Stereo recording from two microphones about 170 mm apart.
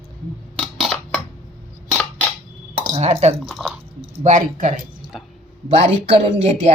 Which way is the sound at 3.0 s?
40° right (ahead or behind).